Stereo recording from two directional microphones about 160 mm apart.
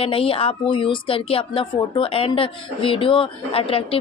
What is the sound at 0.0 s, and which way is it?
Speech, 35° left (ahead or behind).